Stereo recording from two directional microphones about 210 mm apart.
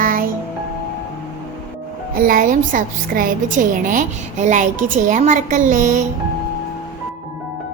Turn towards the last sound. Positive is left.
turn(degrees=-40)  # may be behind; listen again after turning